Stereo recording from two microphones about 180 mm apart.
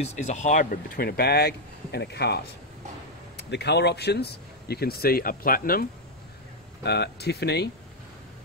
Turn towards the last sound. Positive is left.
turn(degrees=65)  # may be behind; listen again after turning